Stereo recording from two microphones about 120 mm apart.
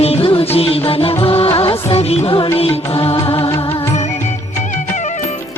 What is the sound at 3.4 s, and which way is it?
Music, 30° left (ahead or behind).